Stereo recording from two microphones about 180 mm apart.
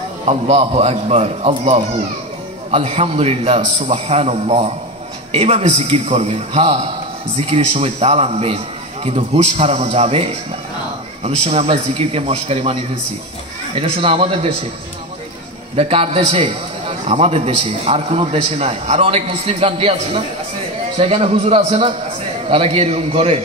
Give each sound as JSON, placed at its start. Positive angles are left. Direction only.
{"t": 0.2, "sound": "a man's voice", "side_deg": -35}
{"t": 13.7, "sound": "a man's voice", "side_deg": -30}
{"t": 15.7, "sound": "a man's voice", "side_deg": -35}